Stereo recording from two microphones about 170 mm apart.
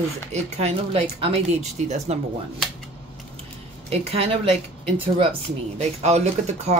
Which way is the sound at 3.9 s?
35° right (ahead or behind).